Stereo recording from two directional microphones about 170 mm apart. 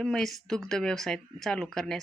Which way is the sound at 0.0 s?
5° left (ahead or behind).